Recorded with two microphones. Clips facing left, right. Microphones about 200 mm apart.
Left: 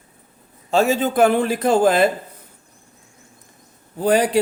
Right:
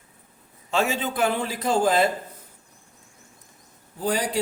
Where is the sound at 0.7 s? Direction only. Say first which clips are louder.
Left 7 dB; 40° left (ahead or behind); by 2.0 s 60° left (ahead or behind).